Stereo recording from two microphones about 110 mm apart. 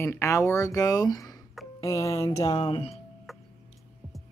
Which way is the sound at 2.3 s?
40° left (ahead or behind).